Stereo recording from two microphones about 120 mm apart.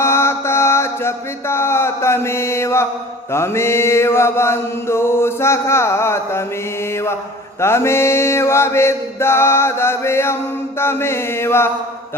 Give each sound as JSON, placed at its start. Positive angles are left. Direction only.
{"t": 0.0, "sound": "mantra", "side_deg": 20}